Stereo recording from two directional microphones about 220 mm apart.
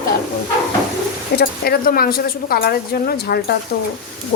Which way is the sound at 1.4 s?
45° left (ahead or behind).